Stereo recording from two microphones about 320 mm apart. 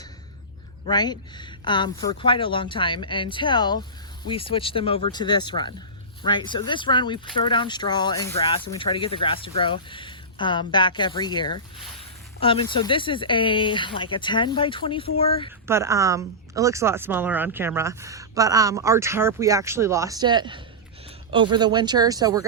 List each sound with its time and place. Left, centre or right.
0.9 s speech: centre
15.6 s speech: centre